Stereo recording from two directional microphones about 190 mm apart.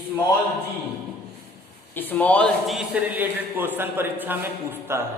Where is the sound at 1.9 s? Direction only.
10° left (ahead or behind).